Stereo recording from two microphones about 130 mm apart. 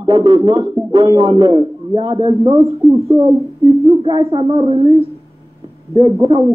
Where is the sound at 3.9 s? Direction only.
40° right (ahead or behind).